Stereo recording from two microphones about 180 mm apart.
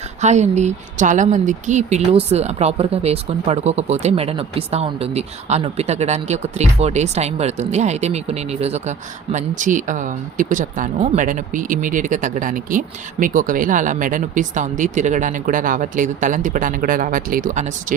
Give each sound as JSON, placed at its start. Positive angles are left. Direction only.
{"t": 0.2, "sound": "speech", "side_deg": -40}